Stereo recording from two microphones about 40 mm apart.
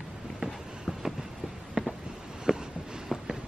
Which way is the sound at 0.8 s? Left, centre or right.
Centre.